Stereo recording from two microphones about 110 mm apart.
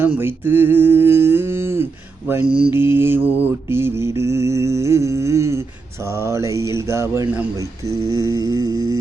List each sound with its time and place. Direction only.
0.2 s mantra: 20° right (ahead or behind)